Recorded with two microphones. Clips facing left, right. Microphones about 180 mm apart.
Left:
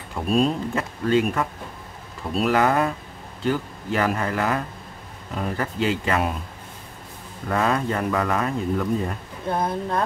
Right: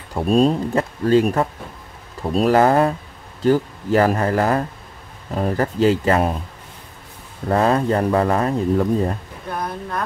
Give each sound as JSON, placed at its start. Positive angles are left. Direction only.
{"t": 0.1, "sound": "speech", "side_deg": -35}
{"t": 7.4, "sound": "speech", "side_deg": -35}
{"t": 9.5, "sound": "speech", "side_deg": 25}